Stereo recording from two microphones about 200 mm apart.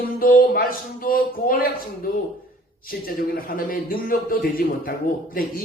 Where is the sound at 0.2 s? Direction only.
45° left (ahead or behind).